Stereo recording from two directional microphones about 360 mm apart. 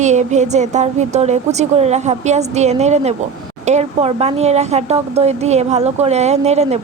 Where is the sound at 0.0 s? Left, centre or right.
Centre.